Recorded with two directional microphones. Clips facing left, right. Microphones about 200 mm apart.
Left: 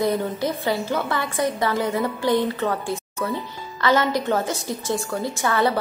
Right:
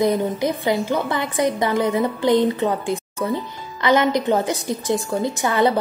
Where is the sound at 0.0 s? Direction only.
15° right (ahead or behind).